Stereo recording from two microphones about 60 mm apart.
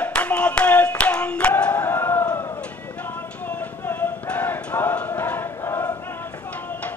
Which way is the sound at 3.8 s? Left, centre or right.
Left.